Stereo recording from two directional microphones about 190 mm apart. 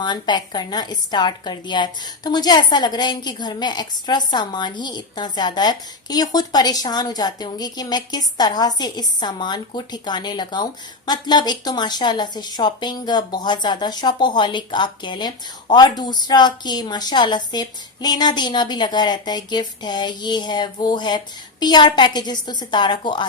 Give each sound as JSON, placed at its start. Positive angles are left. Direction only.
{"t": 0.0, "sound": "a woman's voice", "side_deg": 25}